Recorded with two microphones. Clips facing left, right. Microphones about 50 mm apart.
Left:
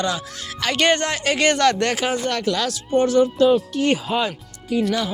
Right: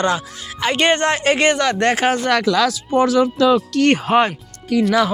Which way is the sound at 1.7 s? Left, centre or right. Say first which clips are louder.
Right 5 dB; right.